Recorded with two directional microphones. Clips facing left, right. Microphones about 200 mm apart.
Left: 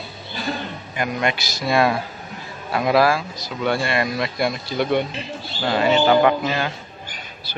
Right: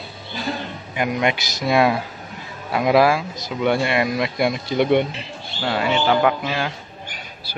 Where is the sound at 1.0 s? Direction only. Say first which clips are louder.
Right 2 dB; 15° right (ahead or behind).